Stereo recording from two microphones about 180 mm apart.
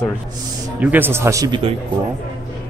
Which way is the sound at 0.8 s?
10° right (ahead or behind).